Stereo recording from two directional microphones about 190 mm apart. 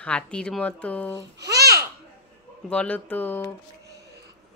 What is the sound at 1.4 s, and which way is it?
Babbling, 60° right (ahead or behind).